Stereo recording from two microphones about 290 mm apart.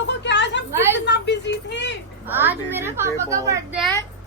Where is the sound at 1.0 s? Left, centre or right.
Left.